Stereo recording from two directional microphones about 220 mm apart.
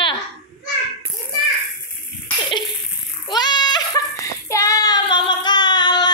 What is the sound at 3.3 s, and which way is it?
Child singing, 20° left (ahead or behind).